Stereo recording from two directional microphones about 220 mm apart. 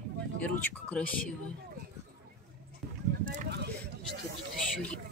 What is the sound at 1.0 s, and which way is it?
Speech, 5° left (ahead or behind).